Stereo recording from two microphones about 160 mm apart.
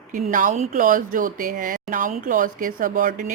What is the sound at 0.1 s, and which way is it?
Speech, 55° right (ahead or behind).